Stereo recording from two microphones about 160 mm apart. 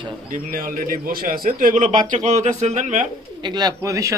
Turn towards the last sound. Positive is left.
turn(degrees=-20)  # may be behind; listen again after turning